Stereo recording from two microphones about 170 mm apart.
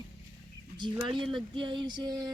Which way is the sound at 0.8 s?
30° right (ahead or behind).